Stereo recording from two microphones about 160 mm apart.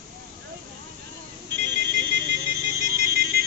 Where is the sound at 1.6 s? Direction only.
90° right.